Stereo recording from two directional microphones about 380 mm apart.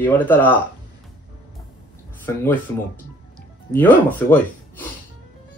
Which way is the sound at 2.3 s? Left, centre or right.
Centre.